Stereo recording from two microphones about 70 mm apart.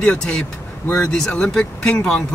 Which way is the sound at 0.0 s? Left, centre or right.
Centre.